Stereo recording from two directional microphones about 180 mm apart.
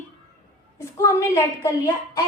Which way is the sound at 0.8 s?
15° left (ahead or behind).